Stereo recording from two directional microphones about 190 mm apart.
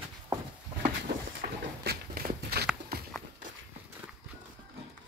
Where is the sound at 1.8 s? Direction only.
55° right (ahead or behind).